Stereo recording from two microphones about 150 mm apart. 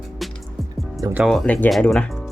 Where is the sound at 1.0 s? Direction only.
10° right (ahead or behind).